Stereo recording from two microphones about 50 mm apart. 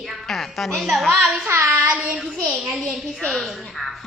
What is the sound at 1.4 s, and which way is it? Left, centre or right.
Child singing, right.